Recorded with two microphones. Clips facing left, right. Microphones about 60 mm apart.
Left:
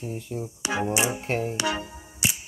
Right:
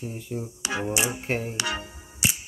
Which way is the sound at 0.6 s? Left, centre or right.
Centre.